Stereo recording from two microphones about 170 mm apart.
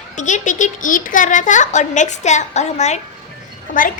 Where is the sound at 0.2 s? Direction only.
45° left (ahead or behind).